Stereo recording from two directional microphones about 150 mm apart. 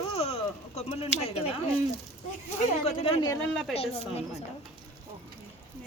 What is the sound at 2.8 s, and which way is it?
Speech, 45° left (ahead or behind).